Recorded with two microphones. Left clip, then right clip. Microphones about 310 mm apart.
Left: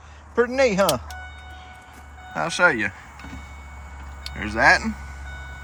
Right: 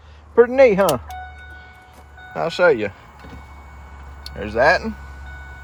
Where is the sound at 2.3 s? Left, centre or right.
Centre.